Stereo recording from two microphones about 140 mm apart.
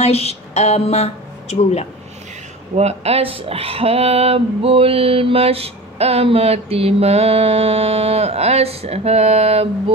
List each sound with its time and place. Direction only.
0.0 s speech: 45° left (ahead or behind)
2.7 s speech: 50° right (ahead or behind)